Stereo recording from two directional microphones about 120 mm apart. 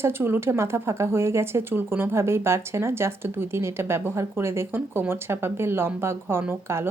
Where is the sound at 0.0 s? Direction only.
20° right (ahead or behind).